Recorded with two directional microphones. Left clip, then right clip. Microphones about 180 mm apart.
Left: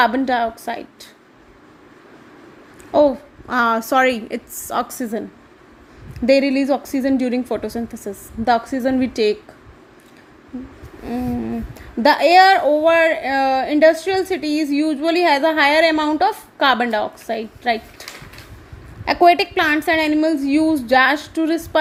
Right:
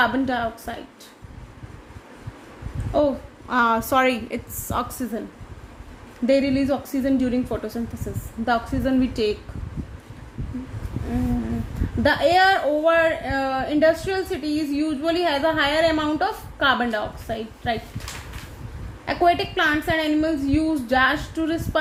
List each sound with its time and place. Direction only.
0.0 s a woman's voice: 40° left (ahead or behind)
2.9 s a woman's voice: 35° left (ahead or behind)
6.2 s a woman's voice: 40° left (ahead or behind)
12.0 s a woman's voice: 40° left (ahead or behind)
19.0 s a woman's voice: 40° left (ahead or behind)